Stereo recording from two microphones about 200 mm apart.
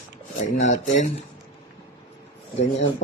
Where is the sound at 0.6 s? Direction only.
35° left (ahead or behind).